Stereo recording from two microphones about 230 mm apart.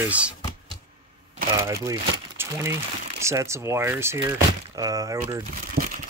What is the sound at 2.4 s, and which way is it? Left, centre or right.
Speech, centre.